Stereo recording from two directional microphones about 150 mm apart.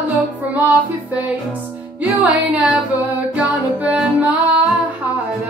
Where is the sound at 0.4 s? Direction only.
10° right (ahead or behind).